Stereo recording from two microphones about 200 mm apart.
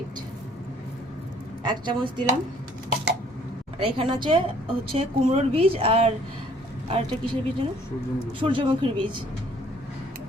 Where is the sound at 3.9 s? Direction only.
25° right (ahead or behind).